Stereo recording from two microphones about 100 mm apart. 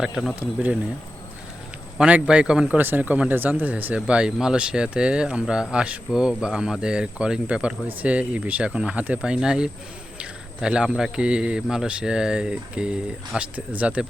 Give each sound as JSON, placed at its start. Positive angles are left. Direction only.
{"t": 0.0, "sound": "speech", "side_deg": 0}
{"t": 0.3, "sound": "a man's voice", "side_deg": -15}
{"t": 2.0, "sound": "a man's voice", "side_deg": -10}